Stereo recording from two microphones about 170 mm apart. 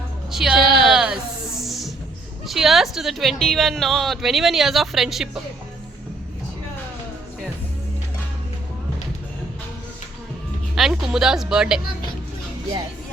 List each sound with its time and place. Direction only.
0.3 s a woman's voice: centre (ahead or behind)
0.6 s a sound: 65° right (ahead or behind)
0.9 s a sound: 5° right (ahead or behind)
1.6 s music: centre (ahead or behind)
2.5 s a woman's voice: centre (ahead or behind)
10.8 s a woman's voice: centre (ahead or behind)